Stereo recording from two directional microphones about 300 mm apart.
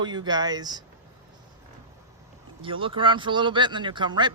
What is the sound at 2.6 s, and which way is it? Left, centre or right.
Speech, centre.